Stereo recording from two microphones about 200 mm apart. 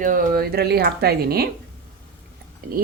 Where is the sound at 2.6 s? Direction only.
50° right (ahead or behind).